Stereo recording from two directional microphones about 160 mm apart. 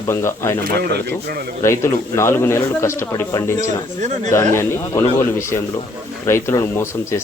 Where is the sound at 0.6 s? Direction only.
85° right.